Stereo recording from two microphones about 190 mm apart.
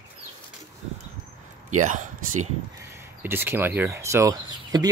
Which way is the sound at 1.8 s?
40° right (ahead or behind).